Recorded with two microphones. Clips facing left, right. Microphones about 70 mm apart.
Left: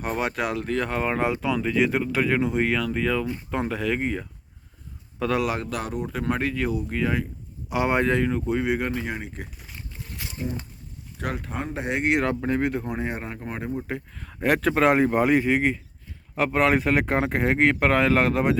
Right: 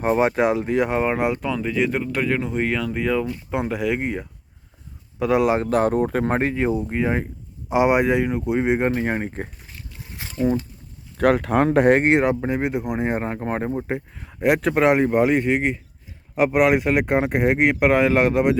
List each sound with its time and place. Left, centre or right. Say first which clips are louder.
0.0 s speech: right 8 dB; right
1.3 s speech: right 1 dB; centre
5.4 s speech: right 7 dB; right
5.6 s speech: right 11 dB; right
10.2 s a sound: right 2 dB; right
11.2 s speech: right 13 dB; right
12.2 s speech: right 3 dB; centre
14.3 s speech: right 3 dB; centre